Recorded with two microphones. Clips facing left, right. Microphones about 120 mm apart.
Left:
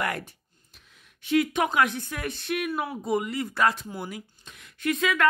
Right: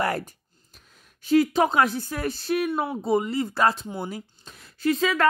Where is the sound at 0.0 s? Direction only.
35° right (ahead or behind).